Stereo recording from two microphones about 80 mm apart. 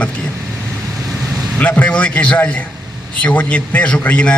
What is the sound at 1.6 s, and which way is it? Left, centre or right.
A man's voice, centre.